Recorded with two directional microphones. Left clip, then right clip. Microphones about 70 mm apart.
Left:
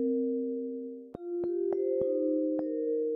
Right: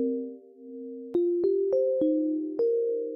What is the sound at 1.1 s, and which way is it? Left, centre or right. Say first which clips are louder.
Music: right 9 dB; centre.